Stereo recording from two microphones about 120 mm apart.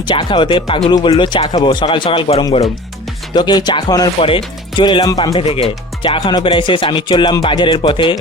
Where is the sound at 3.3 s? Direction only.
35° left (ahead or behind).